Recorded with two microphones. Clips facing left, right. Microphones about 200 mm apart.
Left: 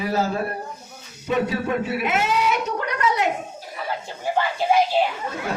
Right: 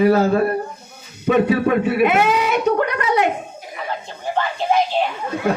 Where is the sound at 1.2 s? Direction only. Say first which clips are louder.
Right 7 dB; 60° right (ahead or behind).